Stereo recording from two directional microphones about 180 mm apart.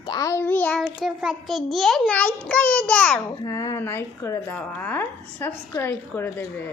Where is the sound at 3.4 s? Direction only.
20° left (ahead or behind).